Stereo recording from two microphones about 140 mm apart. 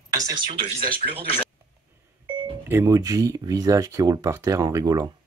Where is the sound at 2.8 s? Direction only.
25° right (ahead or behind).